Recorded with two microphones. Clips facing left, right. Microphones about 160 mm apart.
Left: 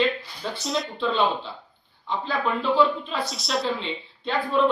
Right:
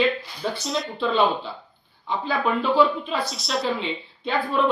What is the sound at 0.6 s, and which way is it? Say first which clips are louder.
Speech: left 2 dB; centre (ahead or behind).